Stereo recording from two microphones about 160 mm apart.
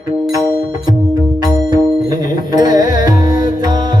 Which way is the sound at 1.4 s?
25° right (ahead or behind).